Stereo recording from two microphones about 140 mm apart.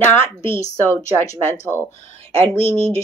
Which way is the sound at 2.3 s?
45° right (ahead or behind).